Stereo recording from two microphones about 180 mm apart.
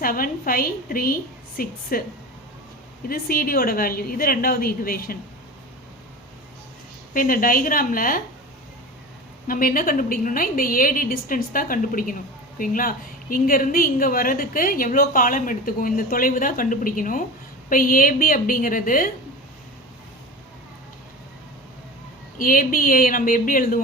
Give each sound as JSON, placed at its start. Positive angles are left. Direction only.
{"t": 0.0, "sound": "a woman's voice", "side_deg": 50}
{"t": 3.1, "sound": "a woman's voice", "side_deg": 55}
{"t": 7.1, "sound": "a woman's voice", "side_deg": 50}
{"t": 9.5, "sound": "a woman's voice", "side_deg": 50}
{"t": 22.4, "sound": "a woman's voice", "side_deg": 50}